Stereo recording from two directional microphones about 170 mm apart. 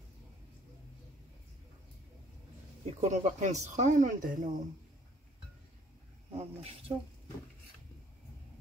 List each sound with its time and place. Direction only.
2.8 s speech: 45° right (ahead or behind)
6.9 s speech: 35° right (ahead or behind)